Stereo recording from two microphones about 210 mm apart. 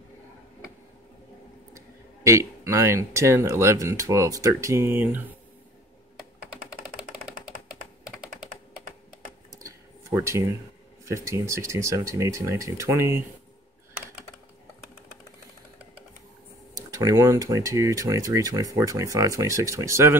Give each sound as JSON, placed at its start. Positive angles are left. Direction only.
{"t": 2.2, "sound": "speech", "side_deg": -15}
{"t": 9.5, "sound": "a sound", "side_deg": -15}
{"t": 11.1, "sound": "speech", "side_deg": -15}
{"t": 16.7, "sound": "speech", "side_deg": -15}